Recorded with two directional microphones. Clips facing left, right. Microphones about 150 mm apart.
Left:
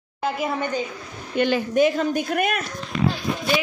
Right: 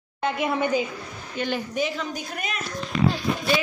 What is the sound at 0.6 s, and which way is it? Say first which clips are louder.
Speech: right 2 dB; 10° right (ahead or behind).